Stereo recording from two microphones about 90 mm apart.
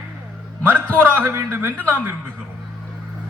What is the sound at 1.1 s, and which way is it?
Speech, 25° right (ahead or behind).